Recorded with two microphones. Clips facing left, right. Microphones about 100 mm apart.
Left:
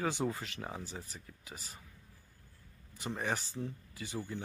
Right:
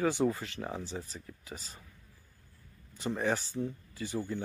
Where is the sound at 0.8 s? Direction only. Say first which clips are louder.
Right 5 dB; 25° right (ahead or behind).